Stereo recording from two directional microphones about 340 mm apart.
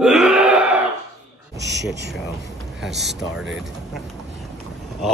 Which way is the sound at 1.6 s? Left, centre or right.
Right.